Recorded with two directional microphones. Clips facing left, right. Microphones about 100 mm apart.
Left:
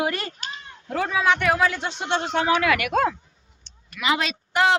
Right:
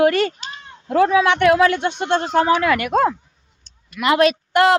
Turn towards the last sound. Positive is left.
turn(degrees=-60)  # may be behind; listen again after turning